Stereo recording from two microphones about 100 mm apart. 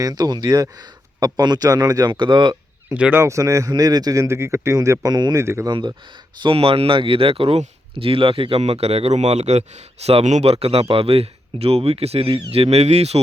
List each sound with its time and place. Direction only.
0.0 s speech: 40° right (ahead or behind)
2.9 s speech: 20° right (ahead or behind)
3.2 s speech: 30° right (ahead or behind)
5.6 s speech: 50° right (ahead or behind)
6.4 s speech: 70° right (ahead or behind); by 13.2 s 90° right